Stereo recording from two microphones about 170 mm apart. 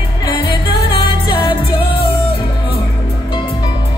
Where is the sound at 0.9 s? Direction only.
30° left (ahead or behind).